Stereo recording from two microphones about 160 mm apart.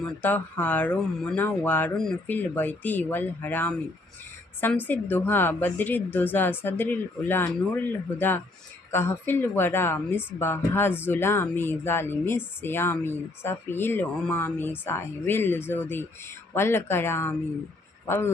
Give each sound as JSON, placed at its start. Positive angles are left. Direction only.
{"t": 0.0, "sound": "a woman's voice", "side_deg": 10}